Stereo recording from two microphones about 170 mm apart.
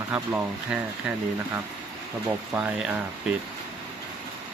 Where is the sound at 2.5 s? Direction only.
10° right (ahead or behind).